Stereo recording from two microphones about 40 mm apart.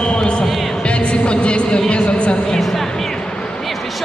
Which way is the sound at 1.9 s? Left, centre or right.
Left.